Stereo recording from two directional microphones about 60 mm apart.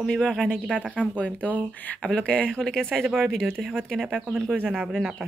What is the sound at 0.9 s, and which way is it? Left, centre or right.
Speech, left.